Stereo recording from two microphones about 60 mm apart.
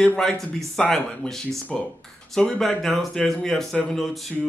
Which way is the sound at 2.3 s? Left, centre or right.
Centre.